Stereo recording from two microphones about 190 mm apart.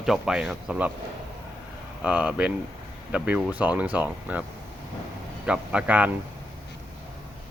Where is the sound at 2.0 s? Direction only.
5° right (ahead or behind).